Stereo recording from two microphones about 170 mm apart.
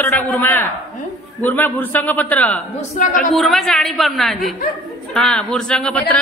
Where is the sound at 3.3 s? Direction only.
Centre (ahead or behind).